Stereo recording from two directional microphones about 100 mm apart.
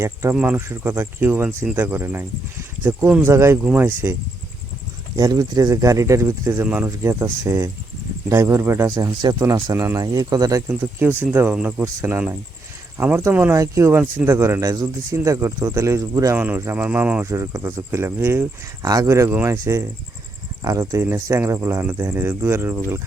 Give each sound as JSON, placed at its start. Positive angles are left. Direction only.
{"t": 0.0, "sound": "speech", "side_deg": -25}
{"t": 3.1, "sound": "speech", "side_deg": -15}
{"t": 3.3, "sound": "speech", "side_deg": -25}
{"t": 5.1, "sound": "speech", "side_deg": -40}
{"t": 9.2, "sound": "speech", "side_deg": -40}
{"t": 9.7, "sound": "speech", "side_deg": -30}
{"t": 10.8, "sound": "speech", "side_deg": -20}
{"t": 16.3, "sound": "speech", "side_deg": -20}
{"t": 17.2, "sound": "speech", "side_deg": -25}
{"t": 18.8, "sound": "speech", "side_deg": -40}
{"t": 19.0, "sound": "speech", "side_deg": -30}